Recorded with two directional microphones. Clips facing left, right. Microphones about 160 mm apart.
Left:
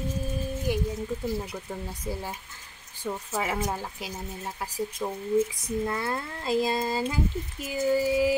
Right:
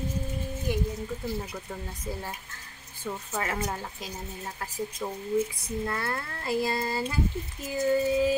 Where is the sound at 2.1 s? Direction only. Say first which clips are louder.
Left 1 dB; 15° left (ahead or behind).